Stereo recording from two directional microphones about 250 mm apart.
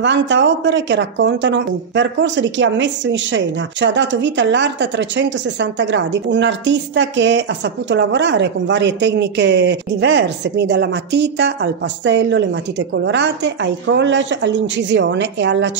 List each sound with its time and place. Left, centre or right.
0.0 s speech: right